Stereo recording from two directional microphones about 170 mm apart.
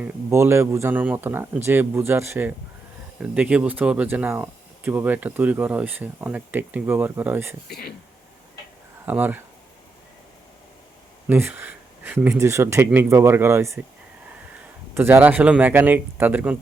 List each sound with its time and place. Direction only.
0.0 s speech: 15° right (ahead or behind)
7.7 s speech: 65° left (ahead or behind)
9.0 s speech: 10° right (ahead or behind)
11.3 s speech: 10° right (ahead or behind)
14.9 s speech: 10° right (ahead or behind)